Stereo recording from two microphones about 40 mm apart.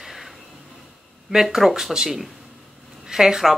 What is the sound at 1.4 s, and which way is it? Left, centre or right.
Speech, centre.